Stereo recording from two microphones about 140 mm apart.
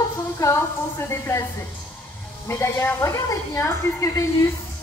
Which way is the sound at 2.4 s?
20° left (ahead or behind).